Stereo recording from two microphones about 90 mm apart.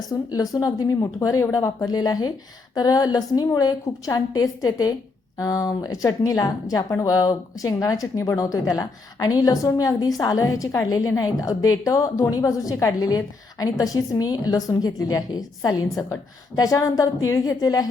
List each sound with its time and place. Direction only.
0.1 s a woman's voice: 40° left (ahead or behind)